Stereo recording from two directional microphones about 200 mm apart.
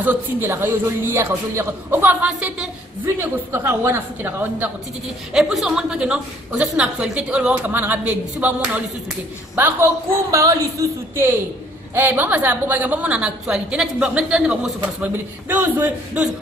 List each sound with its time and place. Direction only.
0.0 s a woman's voice: 10° right (ahead or behind)